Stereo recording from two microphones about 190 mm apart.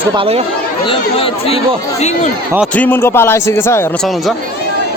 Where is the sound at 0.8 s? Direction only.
30° left (ahead or behind).